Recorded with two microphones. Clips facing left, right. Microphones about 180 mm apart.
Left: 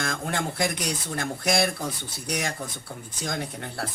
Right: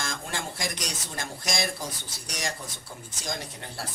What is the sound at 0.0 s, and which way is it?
Speech, 60° left (ahead or behind).